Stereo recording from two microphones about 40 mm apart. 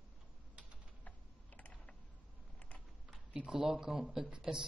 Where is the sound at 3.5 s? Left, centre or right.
Centre.